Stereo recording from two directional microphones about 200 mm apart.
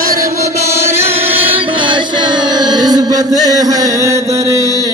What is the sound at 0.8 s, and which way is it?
Chant, 30° right (ahead or behind).